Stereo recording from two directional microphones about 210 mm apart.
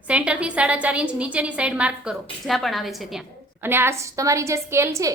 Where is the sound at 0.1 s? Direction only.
5° right (ahead or behind).